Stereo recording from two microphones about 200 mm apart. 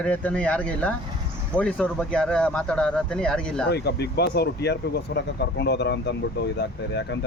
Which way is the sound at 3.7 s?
55° left (ahead or behind).